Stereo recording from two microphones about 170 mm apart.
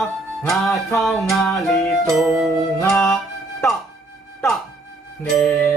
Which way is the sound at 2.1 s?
Centre (ahead or behind).